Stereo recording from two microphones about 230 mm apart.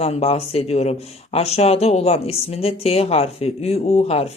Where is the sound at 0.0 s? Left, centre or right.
Left.